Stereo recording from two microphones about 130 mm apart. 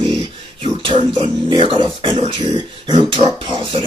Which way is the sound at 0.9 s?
40° right (ahead or behind).